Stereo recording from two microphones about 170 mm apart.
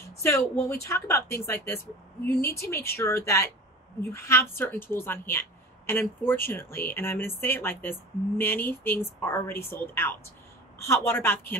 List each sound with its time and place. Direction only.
0.2 s speech: 15° left (ahead or behind)